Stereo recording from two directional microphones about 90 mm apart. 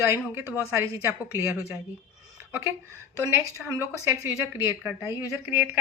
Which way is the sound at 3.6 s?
5° right (ahead or behind).